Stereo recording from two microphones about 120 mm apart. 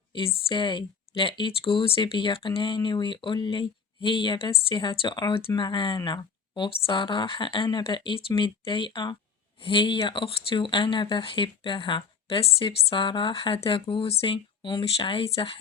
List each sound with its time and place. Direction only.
0.1 s a woman's voice: 50° left (ahead or behind)